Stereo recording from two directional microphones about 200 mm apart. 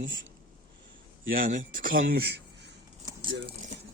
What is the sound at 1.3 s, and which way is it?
Speech, 40° right (ahead or behind).